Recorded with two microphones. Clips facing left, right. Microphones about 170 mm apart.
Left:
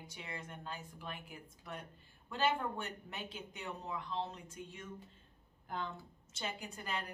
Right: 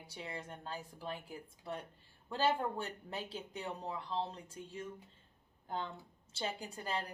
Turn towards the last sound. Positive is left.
turn(degrees=-35)  # may be behind; listen again after turning